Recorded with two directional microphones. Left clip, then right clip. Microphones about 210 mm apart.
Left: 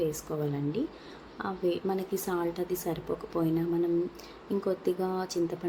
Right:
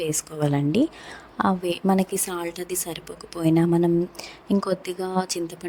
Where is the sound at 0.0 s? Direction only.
45° right (ahead or behind).